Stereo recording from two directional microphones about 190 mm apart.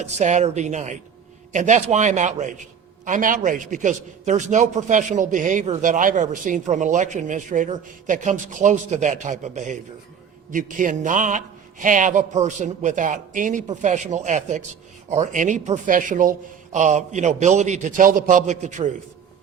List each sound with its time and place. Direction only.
0.0 s a man's voice: 35° right (ahead or behind)